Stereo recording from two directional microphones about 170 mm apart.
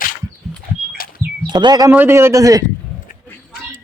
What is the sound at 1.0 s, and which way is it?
Bird, 55° left (ahead or behind).